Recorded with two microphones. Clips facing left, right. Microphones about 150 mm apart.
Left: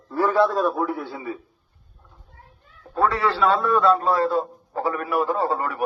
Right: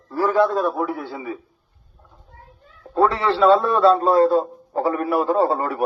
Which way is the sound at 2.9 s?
25° right (ahead or behind).